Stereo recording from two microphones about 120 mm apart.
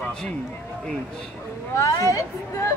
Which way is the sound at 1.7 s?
25° left (ahead or behind).